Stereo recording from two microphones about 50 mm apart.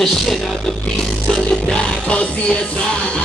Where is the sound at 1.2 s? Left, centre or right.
Centre.